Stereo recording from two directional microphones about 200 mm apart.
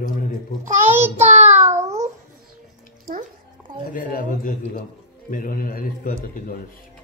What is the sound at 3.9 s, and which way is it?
A man's voice, 45° left (ahead or behind).